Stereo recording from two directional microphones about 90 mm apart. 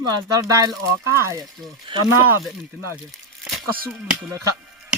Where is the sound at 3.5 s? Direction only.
5° left (ahead or behind).